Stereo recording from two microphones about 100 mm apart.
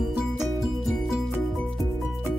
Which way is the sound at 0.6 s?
Centre (ahead or behind).